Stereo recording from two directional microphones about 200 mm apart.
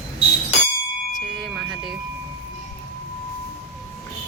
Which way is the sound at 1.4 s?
5° right (ahead or behind).